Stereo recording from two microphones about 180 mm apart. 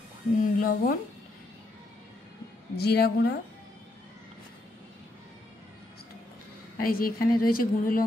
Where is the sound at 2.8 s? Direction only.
60° left (ahead or behind).